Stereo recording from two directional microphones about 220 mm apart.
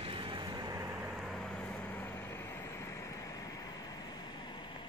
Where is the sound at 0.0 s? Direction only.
25° right (ahead or behind).